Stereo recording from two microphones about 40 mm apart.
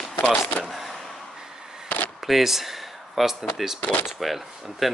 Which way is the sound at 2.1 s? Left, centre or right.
Centre.